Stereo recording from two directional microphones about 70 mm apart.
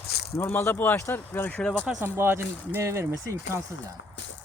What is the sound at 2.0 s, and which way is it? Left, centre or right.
Speech, right.